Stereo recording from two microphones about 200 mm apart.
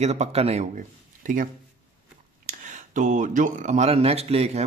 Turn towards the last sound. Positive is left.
turn(degrees=-30)  # may be behind; listen again after turning